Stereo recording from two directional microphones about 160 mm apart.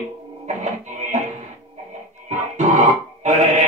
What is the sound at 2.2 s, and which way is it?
Grunt, 45° right (ahead or behind).